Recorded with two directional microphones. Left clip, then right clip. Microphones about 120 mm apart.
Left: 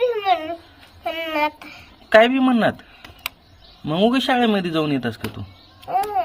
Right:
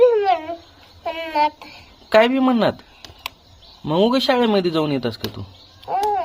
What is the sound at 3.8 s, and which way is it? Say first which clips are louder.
Speech: right 2 dB; 40° right (ahead or behind).